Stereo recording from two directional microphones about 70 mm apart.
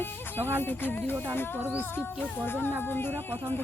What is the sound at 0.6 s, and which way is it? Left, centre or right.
Speech, left.